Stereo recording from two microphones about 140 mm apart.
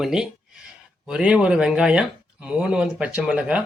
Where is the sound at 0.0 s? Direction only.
5° right (ahead or behind).